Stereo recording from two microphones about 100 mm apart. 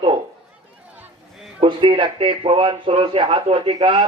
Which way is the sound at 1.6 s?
55° right (ahead or behind).